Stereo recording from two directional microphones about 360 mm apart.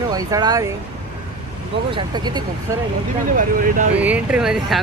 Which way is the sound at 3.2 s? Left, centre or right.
Right.